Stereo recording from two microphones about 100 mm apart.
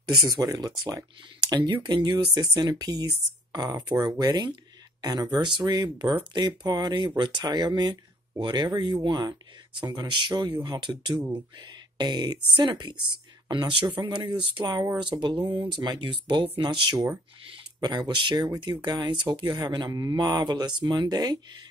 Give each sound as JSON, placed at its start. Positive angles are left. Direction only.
{"t": 0.3, "sound": "speech", "side_deg": -40}
{"t": 19.6, "sound": "speech", "side_deg": -40}